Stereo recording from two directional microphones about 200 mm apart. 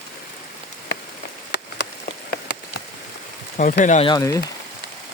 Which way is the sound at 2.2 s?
55° left (ahead or behind).